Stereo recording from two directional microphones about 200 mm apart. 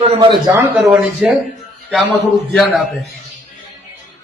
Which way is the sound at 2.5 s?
Centre (ahead or behind).